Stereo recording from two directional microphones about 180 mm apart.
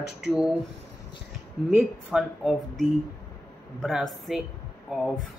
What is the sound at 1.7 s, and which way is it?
Speech, centre (ahead or behind).